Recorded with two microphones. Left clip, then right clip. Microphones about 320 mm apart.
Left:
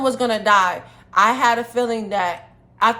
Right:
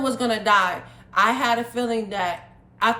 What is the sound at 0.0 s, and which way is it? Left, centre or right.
A woman's voice, centre.